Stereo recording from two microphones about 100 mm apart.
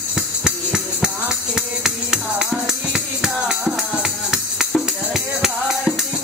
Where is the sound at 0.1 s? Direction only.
5° right (ahead or behind).